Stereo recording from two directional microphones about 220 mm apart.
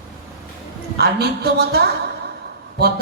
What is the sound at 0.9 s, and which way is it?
Speech, 45° right (ahead or behind).